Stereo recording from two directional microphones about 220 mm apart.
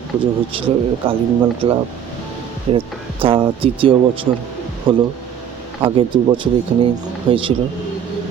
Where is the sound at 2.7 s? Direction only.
25° right (ahead or behind).